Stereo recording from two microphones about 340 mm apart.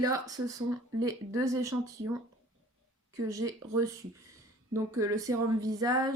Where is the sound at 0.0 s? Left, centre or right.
Centre.